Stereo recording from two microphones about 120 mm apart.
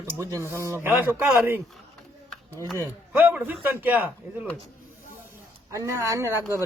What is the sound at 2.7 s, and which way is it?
Speech, 15° right (ahead or behind).